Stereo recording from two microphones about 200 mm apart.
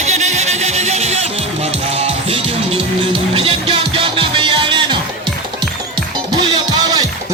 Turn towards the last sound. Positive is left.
turn(degrees=-20)  # may be behind; listen again after turning